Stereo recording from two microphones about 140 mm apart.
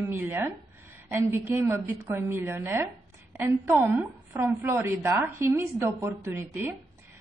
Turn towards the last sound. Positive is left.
turn(degrees=-15)  # may be behind; listen again after turning